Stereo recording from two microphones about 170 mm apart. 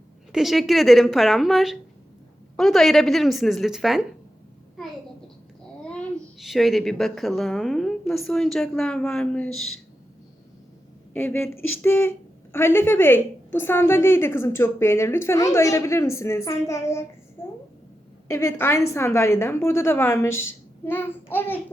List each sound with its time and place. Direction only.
0.3 s a woman's voice: centre (ahead or behind)
5.8 s a woman's voice: 5° left (ahead or behind)
11.1 s a woman's voice: 10° left (ahead or behind)
17.4 s a sound: 15° left (ahead or behind)
18.3 s a woman's voice: 15° left (ahead or behind)